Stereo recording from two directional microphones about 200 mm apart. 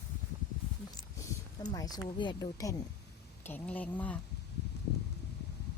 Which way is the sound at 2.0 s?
25° left (ahead or behind).